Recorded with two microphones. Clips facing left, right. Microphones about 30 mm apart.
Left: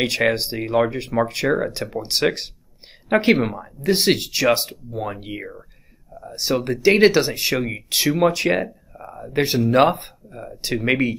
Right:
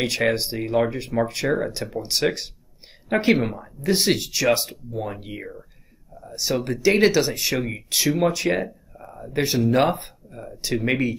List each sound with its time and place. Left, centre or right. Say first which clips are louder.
0.0 s speech: left 2 dB; centre
8.9 s a sound: left 4 dB; centre
9.7 s speech: left 6 dB; centre